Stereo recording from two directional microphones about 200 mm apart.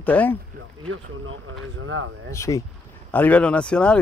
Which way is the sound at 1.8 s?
80° right.